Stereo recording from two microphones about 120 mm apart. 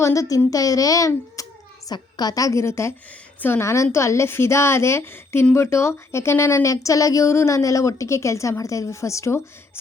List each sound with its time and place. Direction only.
0.0 s speech: 30° left (ahead or behind)